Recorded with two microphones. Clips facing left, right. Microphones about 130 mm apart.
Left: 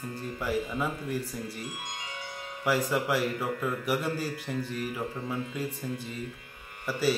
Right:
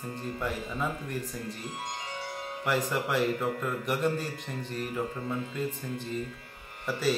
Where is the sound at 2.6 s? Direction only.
5° left (ahead or behind).